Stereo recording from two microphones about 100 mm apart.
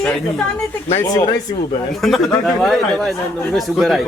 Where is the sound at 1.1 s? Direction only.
40° left (ahead or behind).